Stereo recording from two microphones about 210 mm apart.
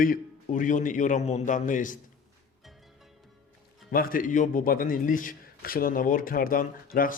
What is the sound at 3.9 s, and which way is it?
A man's voice, 45° left (ahead or behind).